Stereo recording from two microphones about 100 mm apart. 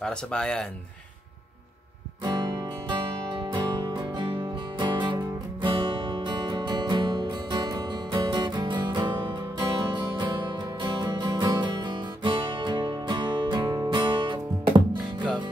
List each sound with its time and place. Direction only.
0.0 s speech: 10° left (ahead or behind)
2.2 s music: 45° right (ahead or behind)